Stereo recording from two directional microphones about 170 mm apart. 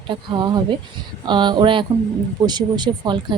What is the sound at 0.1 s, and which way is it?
Speech, 25° right (ahead or behind).